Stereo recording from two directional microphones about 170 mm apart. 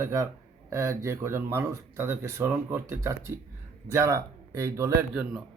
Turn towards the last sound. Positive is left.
turn(degrees=0)  # may be behind; listen again after turning